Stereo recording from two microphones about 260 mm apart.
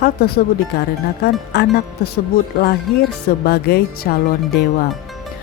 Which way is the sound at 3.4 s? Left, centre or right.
Left.